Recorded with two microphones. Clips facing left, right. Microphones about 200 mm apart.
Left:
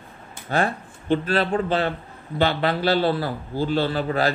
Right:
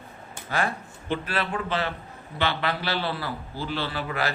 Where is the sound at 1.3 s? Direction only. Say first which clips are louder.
Left 6 dB; 30° left (ahead or behind).